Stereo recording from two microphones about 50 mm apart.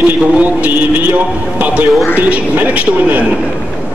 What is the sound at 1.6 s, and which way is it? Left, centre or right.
Speech, right.